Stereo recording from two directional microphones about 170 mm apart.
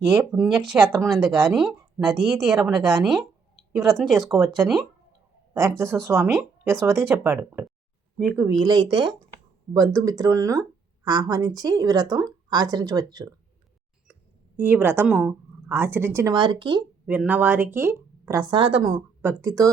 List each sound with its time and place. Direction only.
0.3 s speech: centre (ahead or behind)
2.6 s speech: 20° right (ahead or behind)
3.8 s speech: centre (ahead or behind)
5.5 s speech: 15° right (ahead or behind)
8.4 s speech: 25° right (ahead or behind)
14.1 s speech: 10° right (ahead or behind)
16.3 s speech: 25° right (ahead or behind)
17.1 s speech: 10° right (ahead or behind)